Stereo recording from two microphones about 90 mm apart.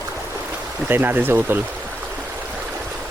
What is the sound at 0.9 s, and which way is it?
Speech, 20° right (ahead or behind).